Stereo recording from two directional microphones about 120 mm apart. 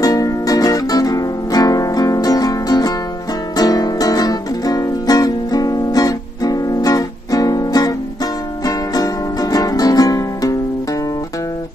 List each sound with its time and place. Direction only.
0.0 s music: 30° left (ahead or behind)